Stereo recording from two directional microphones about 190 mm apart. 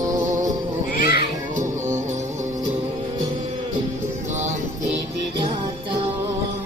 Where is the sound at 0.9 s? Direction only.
50° left (ahead or behind).